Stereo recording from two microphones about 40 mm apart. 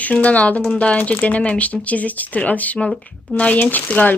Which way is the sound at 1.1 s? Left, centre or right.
Left.